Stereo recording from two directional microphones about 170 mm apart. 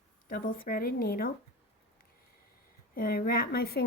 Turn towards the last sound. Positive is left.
turn(degrees=65)  # may be behind; listen again after turning